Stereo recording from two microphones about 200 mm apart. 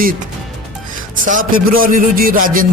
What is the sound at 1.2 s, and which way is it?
Music, 45° right (ahead or behind).